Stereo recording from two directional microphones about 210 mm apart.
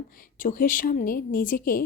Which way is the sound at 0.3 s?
40° left (ahead or behind).